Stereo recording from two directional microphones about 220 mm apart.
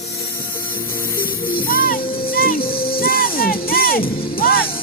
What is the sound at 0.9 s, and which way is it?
Music, 40° left (ahead or behind).